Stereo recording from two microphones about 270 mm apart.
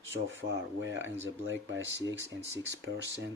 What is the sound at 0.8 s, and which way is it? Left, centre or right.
Speech, right.